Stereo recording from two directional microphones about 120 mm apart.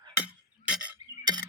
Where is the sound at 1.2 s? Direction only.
35° right (ahead or behind).